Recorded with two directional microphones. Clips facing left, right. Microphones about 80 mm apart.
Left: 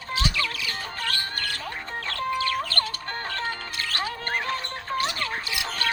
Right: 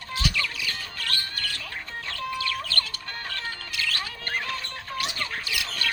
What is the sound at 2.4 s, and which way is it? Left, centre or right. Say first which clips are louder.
Chirp: left 4 dB; left.